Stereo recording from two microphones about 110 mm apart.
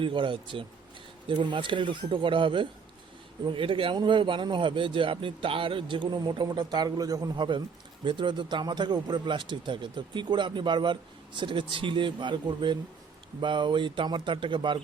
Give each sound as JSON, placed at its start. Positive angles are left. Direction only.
{"t": 0.0, "sound": "speech", "side_deg": -50}